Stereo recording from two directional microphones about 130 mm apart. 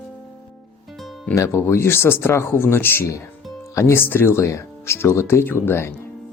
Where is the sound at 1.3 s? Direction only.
20° left (ahead or behind).